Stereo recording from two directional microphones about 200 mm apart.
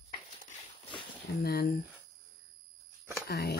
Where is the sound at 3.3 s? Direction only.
55° left (ahead or behind).